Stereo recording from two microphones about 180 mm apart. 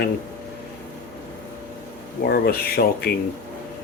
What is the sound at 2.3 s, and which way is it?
Speech, 60° left (ahead or behind).